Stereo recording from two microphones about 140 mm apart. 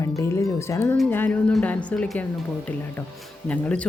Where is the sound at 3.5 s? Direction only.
10° left (ahead or behind).